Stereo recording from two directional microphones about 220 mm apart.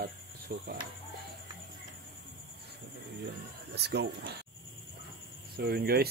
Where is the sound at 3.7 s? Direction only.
50° right (ahead or behind).